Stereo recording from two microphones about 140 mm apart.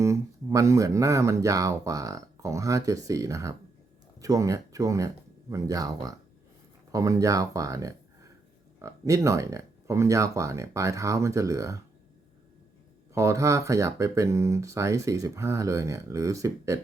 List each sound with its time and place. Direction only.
0.0 s speech: 20° right (ahead or behind)
13.1 s speech: 20° right (ahead or behind)